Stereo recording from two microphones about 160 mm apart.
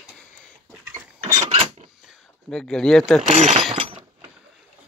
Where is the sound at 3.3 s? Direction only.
45° right (ahead or behind).